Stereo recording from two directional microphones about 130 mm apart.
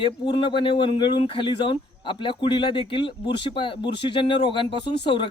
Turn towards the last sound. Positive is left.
turn(degrees=40)  # may be behind; listen again after turning